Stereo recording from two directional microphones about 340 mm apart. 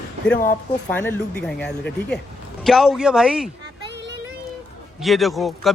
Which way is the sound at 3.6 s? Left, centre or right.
Right.